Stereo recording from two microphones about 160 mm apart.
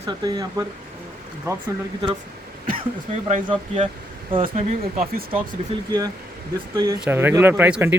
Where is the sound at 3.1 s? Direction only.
45° right (ahead or behind).